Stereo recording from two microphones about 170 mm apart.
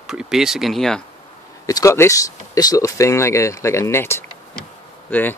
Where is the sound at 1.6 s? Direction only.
20° left (ahead or behind).